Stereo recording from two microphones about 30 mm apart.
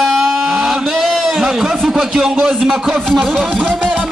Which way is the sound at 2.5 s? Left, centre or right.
Centre.